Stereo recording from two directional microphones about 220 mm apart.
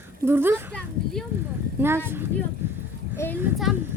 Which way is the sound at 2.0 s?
10° right (ahead or behind).